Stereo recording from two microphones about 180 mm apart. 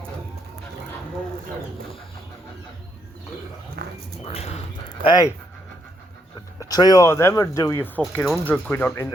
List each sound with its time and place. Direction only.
3.8 s a sound: 60° right (ahead or behind)
4.2 s speech: 35° left (ahead or behind)
5.0 s speech: 20° left (ahead or behind)
6.6 s speech: 20° left (ahead or behind)